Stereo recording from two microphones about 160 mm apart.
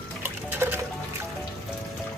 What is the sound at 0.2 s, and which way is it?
Music, 10° right (ahead or behind).